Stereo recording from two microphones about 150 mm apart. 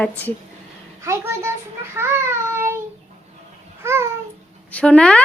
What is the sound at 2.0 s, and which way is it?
Child singing, 15° right (ahead or behind).